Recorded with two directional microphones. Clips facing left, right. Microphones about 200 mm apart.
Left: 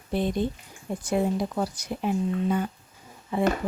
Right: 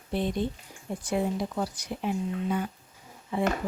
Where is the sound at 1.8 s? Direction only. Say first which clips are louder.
Left 3 dB; 45° left (ahead or behind).